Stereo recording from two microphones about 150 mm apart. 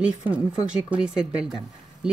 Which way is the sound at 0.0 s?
10° right (ahead or behind).